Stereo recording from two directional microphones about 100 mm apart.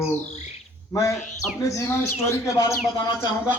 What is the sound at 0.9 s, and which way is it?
Speech, 30° left (ahead or behind).